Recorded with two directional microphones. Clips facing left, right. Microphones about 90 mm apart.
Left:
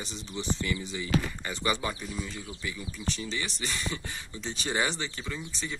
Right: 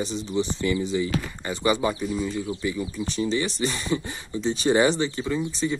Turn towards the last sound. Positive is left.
turn(degrees=-20)  # may be behind; listen again after turning